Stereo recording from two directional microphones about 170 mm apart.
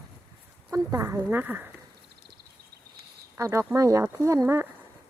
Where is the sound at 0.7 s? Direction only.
20° right (ahead or behind).